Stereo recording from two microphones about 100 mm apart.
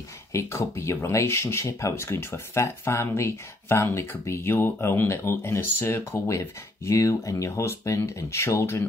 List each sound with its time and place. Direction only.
0.3 s speech: 30° left (ahead or behind)